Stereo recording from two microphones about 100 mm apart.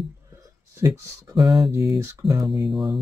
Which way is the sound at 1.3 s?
45° right (ahead or behind).